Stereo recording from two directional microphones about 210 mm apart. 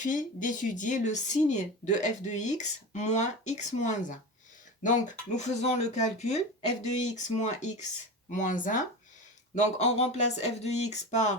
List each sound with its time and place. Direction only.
0.0 s speech: 35° left (ahead or behind)